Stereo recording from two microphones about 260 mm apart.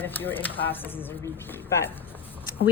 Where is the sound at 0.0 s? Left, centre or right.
Centre.